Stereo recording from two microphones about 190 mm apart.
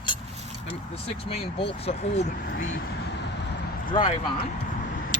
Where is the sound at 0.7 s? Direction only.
30° left (ahead or behind).